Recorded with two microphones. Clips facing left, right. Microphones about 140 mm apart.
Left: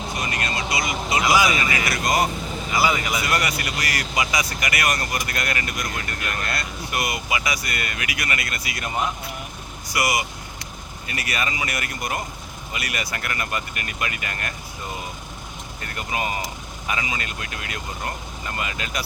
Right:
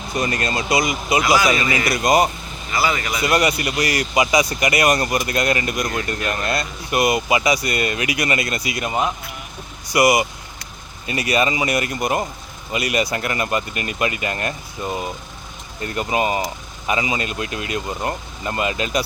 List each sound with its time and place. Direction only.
0.2 s speech: 35° right (ahead or behind)
0.7 s speech: 20° right (ahead or behind)
2.7 s speech: 15° left (ahead or behind)
3.2 s speech: 20° right (ahead or behind)